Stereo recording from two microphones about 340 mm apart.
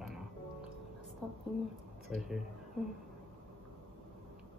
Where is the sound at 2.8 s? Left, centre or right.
Centre.